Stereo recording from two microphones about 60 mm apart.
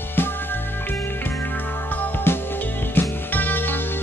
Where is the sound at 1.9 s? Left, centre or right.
Left.